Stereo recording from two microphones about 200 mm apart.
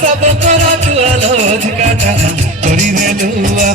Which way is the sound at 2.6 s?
35° right (ahead or behind).